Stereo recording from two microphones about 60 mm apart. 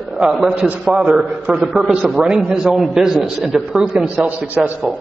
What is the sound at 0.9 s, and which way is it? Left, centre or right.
A man's voice, centre.